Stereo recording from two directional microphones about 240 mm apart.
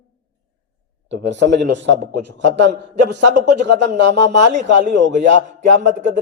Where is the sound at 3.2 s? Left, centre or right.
Right.